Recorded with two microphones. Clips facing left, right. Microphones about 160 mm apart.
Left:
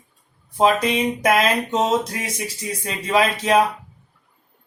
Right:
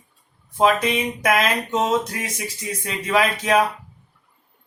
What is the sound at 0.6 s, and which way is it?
Speech, 30° left (ahead or behind).